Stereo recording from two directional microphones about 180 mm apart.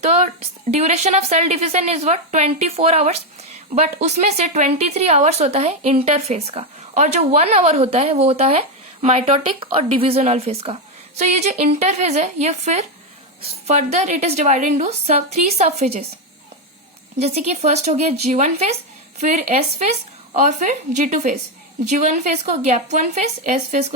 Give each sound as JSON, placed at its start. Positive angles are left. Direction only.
{"t": 0.7, "sound": "speech", "side_deg": -35}
{"t": 17.2, "sound": "speech", "side_deg": -35}